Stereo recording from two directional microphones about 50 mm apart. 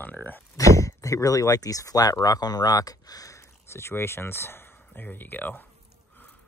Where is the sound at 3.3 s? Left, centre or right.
Left.